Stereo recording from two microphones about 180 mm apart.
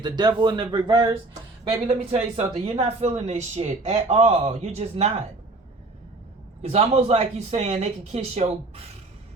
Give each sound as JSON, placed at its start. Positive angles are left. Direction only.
{"t": 0.0, "sound": "speech", "side_deg": -25}
{"t": 6.6, "sound": "speech", "side_deg": -35}